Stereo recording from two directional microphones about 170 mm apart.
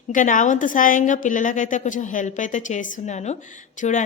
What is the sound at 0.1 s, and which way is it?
A woman's voice, 50° left (ahead or behind).